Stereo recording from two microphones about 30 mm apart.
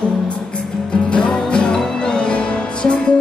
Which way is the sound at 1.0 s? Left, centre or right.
Left.